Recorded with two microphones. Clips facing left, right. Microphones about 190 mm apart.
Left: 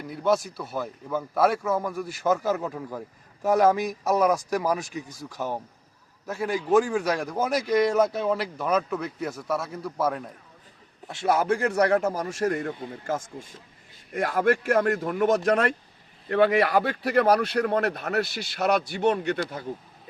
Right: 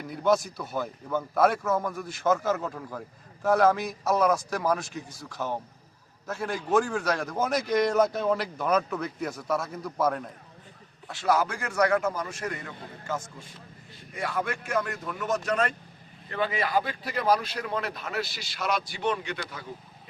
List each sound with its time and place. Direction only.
0.0 s a man's voice: centre (ahead or behind)
11.1 s a man's voice: 25° left (ahead or behind); by 19.6 s 45° left (ahead or behind)